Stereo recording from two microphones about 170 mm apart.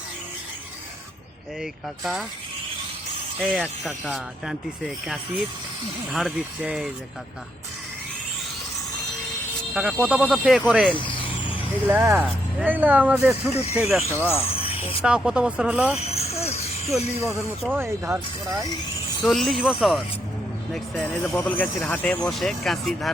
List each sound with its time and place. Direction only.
3.4 s speech: centre (ahead or behind)
9.7 s speech: 5° right (ahead or behind)
11.9 s speech: 10° right (ahead or behind)
14.5 s music: 35° left (ahead or behind)
15.0 s speech: 5° right (ahead or behind)
16.0 s vehicle: 35° left (ahead or behind)
16.8 s speech: centre (ahead or behind)
17.7 s speech: 15° right (ahead or behind)
19.2 s speech: centre (ahead or behind)